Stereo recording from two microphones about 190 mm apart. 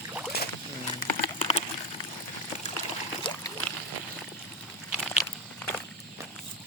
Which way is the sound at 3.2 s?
25° left (ahead or behind).